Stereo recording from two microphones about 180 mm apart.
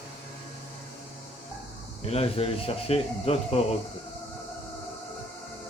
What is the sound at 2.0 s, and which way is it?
Speech, 35° left (ahead or behind).